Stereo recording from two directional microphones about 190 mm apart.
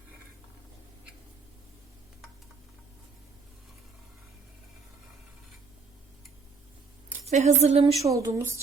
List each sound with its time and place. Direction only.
7.3 s speech: 35° right (ahead or behind)
8.0 s speech: 15° right (ahead or behind)